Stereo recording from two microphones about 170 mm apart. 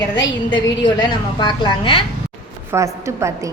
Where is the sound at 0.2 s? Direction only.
25° left (ahead or behind).